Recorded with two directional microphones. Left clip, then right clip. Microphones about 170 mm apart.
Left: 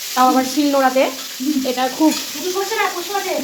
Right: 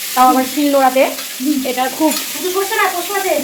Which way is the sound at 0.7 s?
5° left (ahead or behind).